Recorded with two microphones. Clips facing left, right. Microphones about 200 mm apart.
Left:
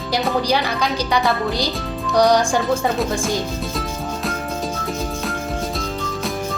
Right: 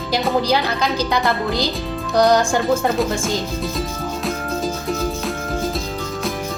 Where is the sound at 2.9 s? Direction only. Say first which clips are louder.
Right 1 dB; centre (ahead or behind).